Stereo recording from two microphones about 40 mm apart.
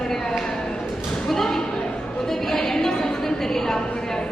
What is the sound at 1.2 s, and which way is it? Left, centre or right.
Thump, centre.